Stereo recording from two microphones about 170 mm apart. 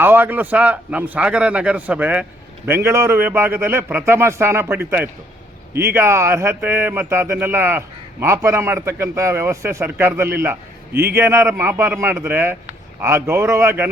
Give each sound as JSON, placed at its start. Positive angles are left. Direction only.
{"t": 0.0, "sound": "speech", "side_deg": -10}